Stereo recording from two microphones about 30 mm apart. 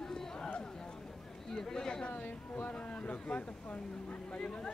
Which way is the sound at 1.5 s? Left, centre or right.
Centre.